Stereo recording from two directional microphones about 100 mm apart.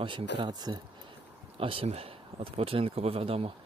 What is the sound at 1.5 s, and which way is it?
Speech, 65° right (ahead or behind).